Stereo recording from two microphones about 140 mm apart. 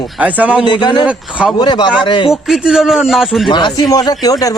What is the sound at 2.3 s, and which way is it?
Speech, 5° right (ahead or behind).